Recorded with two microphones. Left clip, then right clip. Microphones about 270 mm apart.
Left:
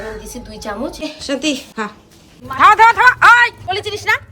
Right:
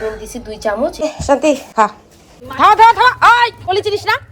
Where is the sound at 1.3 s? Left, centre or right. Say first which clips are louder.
Right 8 dB; centre.